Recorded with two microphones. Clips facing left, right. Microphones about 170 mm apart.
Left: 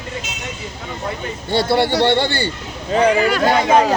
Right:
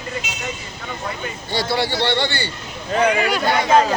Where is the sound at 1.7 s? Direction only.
55° left (ahead or behind).